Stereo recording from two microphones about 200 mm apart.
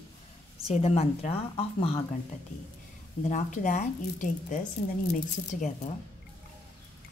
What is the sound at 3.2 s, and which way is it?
A woman's voice, 35° left (ahead or behind).